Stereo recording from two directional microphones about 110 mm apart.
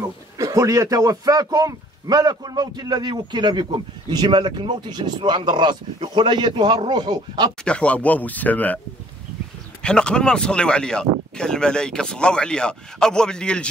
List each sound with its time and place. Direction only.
0.4 s a man's voice: 30° right (ahead or behind)
7.6 s speech: 10° left (ahead or behind)
9.8 s speech: 10° left (ahead or behind)